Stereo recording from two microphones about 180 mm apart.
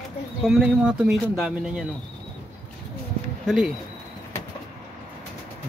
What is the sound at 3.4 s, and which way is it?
Speech, centre (ahead or behind).